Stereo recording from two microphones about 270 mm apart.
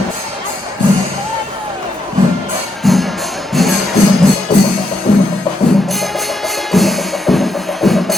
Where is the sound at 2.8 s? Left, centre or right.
Centre.